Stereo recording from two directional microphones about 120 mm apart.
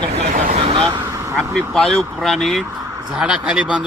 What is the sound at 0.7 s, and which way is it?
Speech, 45° right (ahead or behind).